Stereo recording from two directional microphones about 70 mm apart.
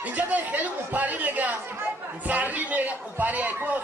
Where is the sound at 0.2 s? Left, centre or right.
Right.